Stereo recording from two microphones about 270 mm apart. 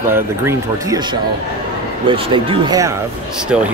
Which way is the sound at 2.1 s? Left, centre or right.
Centre.